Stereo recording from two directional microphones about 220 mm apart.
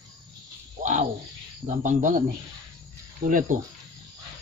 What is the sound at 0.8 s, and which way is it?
Frog, 35° right (ahead or behind).